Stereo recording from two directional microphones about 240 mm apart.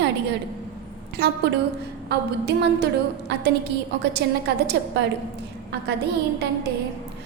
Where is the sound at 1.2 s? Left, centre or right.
Right.